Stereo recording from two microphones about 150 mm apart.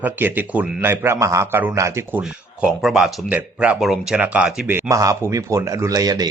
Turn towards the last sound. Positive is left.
turn(degrees=-25)  # may be behind; listen again after turning